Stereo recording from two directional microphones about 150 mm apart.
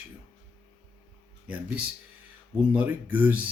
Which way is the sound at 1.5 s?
10° right (ahead or behind).